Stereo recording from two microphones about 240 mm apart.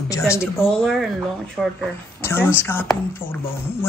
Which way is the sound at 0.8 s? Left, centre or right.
Centre.